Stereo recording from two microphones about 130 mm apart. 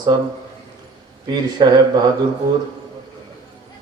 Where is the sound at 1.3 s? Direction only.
35° right (ahead or behind).